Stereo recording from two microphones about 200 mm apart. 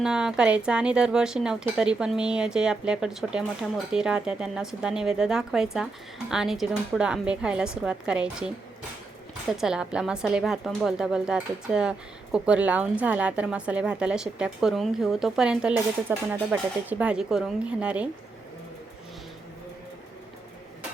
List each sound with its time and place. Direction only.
0.0 s a woman's voice: 5° right (ahead or behind)